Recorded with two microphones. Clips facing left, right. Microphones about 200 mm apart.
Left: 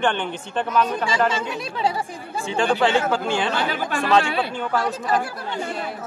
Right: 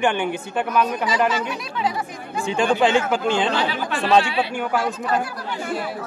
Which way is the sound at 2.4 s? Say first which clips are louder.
Right 2 dB; 15° right (ahead or behind).